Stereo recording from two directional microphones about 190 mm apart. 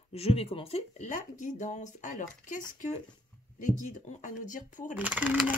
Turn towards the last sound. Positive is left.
turn(degrees=-10)  # may be behind; listen again after turning